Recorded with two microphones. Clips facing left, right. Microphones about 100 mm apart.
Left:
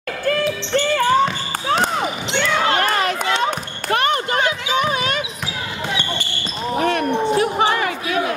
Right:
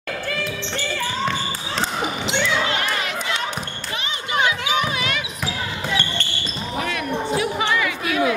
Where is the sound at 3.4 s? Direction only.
55° left (ahead or behind); by 5.2 s 35° left (ahead or behind).